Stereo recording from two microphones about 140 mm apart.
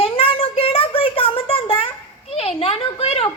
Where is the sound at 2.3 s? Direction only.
45° left (ahead or behind).